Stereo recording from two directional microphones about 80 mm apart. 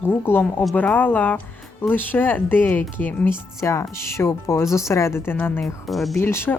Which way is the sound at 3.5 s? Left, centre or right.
Left.